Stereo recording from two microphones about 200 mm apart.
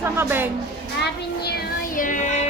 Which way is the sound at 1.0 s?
50° left (ahead or behind).